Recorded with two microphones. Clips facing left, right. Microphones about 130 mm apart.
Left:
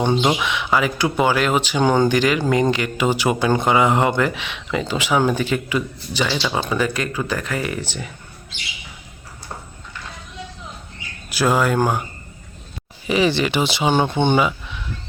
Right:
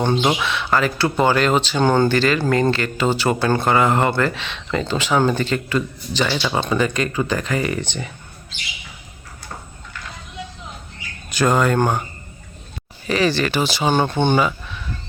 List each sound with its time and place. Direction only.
0.2 s speech: centre (ahead or behind)
0.4 s speech: 15° left (ahead or behind)
6.2 s speech: 10° right (ahead or behind)
6.5 s speech: 5° left (ahead or behind)
11.3 s speech: 5° left (ahead or behind)
13.1 s speech: 15° left (ahead or behind)